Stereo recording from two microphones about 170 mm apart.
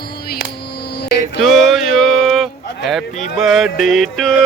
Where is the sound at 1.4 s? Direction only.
Centre (ahead or behind).